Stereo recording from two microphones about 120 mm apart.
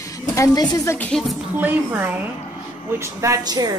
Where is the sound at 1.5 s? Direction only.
15° right (ahead or behind); by 3.7 s 35° right (ahead or behind).